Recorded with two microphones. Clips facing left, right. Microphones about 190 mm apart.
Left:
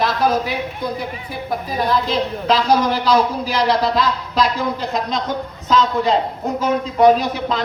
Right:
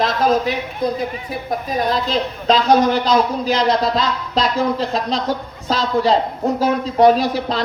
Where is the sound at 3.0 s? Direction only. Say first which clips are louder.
Even; 25° right (ahead or behind).